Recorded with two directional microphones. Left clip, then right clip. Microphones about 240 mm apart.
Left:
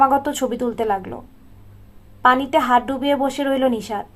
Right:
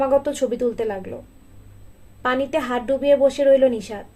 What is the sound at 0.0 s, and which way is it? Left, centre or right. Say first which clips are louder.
Speech: left 3 dB; left.